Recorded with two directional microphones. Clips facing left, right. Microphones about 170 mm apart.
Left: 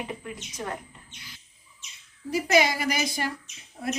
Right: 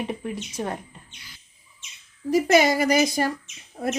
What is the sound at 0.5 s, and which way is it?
Speech, 30° right (ahead or behind).